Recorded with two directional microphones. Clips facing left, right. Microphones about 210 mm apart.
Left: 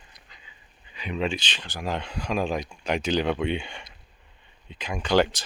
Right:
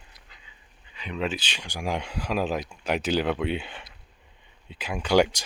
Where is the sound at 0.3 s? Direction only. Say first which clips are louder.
Left 2 dB; 5° right (ahead or behind).